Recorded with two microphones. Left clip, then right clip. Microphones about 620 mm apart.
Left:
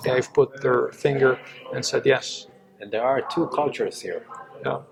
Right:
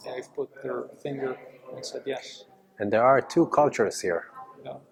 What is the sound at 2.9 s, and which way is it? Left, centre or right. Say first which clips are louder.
Speech: right 2 dB; right.